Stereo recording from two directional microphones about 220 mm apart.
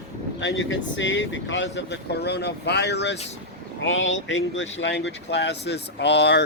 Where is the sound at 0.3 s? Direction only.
60° left (ahead or behind).